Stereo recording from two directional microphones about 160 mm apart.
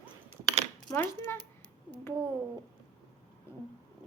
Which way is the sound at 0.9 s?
15° left (ahead or behind).